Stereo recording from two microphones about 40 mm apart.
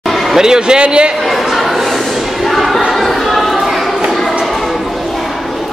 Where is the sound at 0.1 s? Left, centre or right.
Centre.